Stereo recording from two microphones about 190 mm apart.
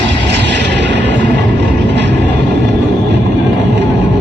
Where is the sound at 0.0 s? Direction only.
65° right (ahead or behind).